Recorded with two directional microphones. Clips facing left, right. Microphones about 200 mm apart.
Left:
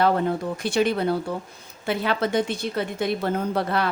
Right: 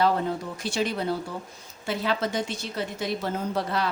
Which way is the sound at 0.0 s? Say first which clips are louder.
Left 3 dB; 60° left (ahead or behind).